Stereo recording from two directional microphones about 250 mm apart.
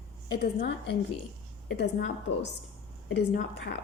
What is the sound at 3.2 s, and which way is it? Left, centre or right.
Speech, left.